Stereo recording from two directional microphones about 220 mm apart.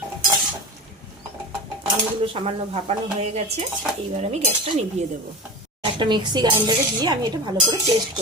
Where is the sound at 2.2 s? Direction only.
25° right (ahead or behind).